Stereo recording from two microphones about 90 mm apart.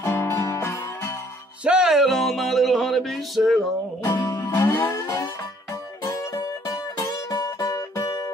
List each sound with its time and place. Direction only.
0.0 s music: 30° left (ahead or behind)
1.6 s music: 10° right (ahead or behind)
4.0 s music: 45° left (ahead or behind)
4.5 s music: 25° left (ahead or behind); by 8.3 s 40° left (ahead or behind)